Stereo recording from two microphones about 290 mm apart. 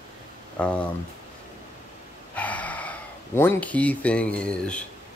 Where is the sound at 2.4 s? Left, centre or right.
Centre.